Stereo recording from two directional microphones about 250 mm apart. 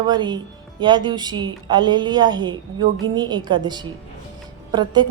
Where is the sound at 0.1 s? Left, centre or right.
Centre.